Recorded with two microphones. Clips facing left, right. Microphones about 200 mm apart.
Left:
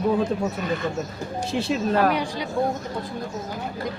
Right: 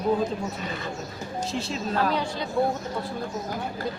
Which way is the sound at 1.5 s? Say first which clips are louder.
Left 8 dB; 65° left (ahead or behind).